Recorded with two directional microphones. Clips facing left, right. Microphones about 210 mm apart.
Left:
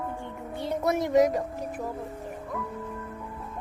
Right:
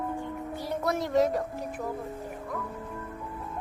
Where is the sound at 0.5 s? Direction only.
20° left (ahead or behind).